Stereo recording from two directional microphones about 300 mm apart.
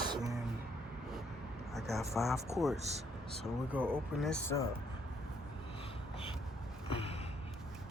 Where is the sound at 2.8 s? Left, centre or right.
Right.